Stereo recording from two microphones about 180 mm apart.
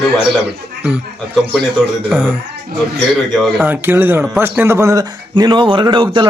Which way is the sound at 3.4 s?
5° right (ahead or behind).